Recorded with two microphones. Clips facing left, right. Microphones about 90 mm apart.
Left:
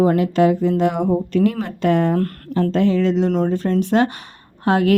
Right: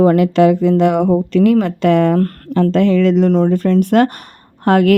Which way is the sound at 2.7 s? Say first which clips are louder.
Right 4 dB; 70° right (ahead or behind).